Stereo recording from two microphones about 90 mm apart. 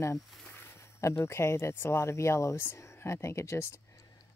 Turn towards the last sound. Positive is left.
turn(degrees=30)  # may be behind; listen again after turning